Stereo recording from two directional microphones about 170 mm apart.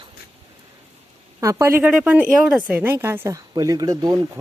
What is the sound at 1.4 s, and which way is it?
Speech, 15° right (ahead or behind).